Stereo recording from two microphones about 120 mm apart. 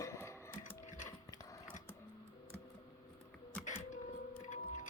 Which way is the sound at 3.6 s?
90° left.